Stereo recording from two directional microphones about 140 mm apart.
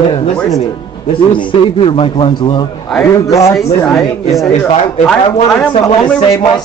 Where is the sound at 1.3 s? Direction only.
35° left (ahead or behind).